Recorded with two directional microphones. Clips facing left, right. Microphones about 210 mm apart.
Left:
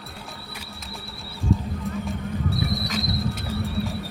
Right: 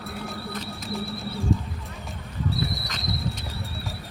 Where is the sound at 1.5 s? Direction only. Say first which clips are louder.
Left 3 dB; centre (ahead or behind).